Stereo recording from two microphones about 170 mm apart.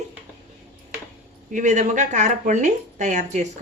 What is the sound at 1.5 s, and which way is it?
Speech, 45° right (ahead or behind).